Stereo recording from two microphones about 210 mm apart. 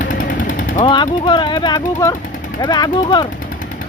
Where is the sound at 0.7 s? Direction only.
20° left (ahead or behind).